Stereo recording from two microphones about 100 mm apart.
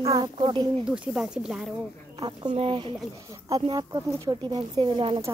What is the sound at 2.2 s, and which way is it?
Speech, 45° right (ahead or behind).